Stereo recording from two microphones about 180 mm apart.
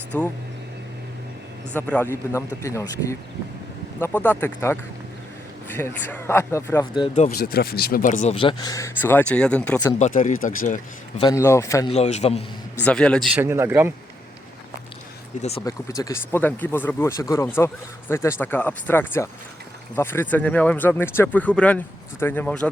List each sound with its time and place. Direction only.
0.1 s speech: 10° left (ahead or behind)
1.7 s speech: 10° left (ahead or behind)
7.1 s speech: 45° left (ahead or behind)
7.3 s speech: 60° left (ahead or behind)
8.4 s speech: 25° left (ahead or behind); by 9.8 s 5° left (ahead or behind)
10.0 s speech: 45° left (ahead or behind)
11.2 s speech: 15° left (ahead or behind)
11.9 s a man's voice: 40° left (ahead or behind)
12.8 s a man's voice: 5° left (ahead or behind)
13.4 s speech: 15° right (ahead or behind)
15.4 s a man's voice: 35° left (ahead or behind)
15.6 s speech: 20° left (ahead or behind)